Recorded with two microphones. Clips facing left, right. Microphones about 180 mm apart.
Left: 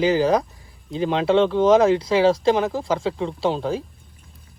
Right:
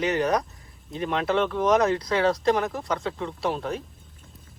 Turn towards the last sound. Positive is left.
turn(degrees=30)  # may be behind; listen again after turning